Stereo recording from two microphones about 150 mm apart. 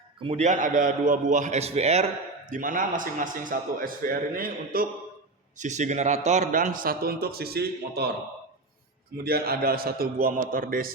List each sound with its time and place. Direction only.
0.2 s a man's voice: 45° right (ahead or behind)
2.5 s a man's voice: 65° right (ahead or behind)
5.5 s a man's voice: 55° right (ahead or behind); by 8.1 s 90° right
9.1 s a man's voice: 90° right; by 10.9 s 70° right (ahead or behind)